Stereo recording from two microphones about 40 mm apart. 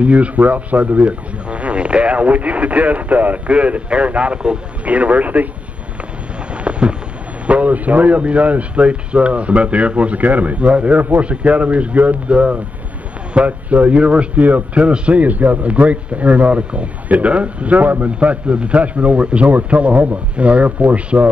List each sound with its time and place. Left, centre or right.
0.0 s a man's voice: right
6.5 s a sound: right
7.4 s a man's voice: right
14.4 s speech: right
14.8 s a man's voice: right